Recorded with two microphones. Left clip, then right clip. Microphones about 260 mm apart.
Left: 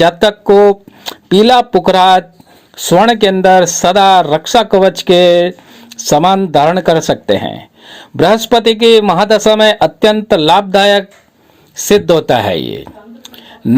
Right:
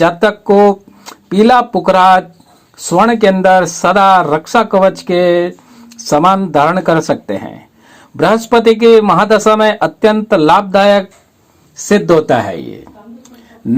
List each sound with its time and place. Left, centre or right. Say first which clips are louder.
0.0 s speech: left 2 dB; left